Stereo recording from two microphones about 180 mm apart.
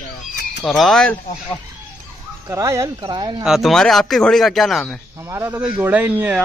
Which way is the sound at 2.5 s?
15° right (ahead or behind).